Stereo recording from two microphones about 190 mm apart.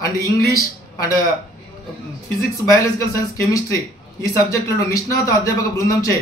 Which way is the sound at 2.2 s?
15° left (ahead or behind).